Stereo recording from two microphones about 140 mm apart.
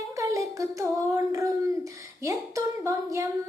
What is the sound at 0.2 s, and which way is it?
Child singing, 25° right (ahead or behind).